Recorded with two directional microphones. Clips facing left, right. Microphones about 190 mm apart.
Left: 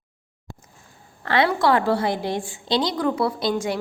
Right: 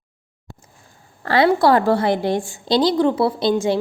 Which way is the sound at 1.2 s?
35° right (ahead or behind).